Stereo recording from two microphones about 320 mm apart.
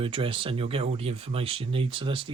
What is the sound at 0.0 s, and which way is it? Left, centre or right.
Speech, centre.